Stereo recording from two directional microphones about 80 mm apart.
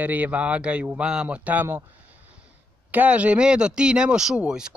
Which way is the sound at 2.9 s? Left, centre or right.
Centre.